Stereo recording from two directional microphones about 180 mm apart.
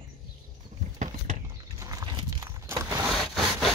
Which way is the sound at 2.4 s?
15° right (ahead or behind).